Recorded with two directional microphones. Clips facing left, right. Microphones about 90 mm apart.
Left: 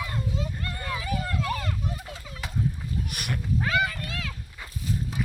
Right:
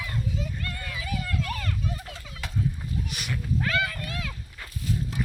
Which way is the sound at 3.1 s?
50° left (ahead or behind).